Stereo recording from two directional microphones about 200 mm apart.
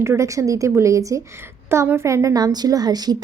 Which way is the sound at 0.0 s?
15° right (ahead or behind).